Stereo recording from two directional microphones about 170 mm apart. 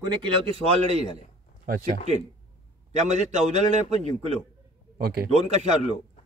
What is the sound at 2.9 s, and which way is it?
A man's voice, 45° right (ahead or behind).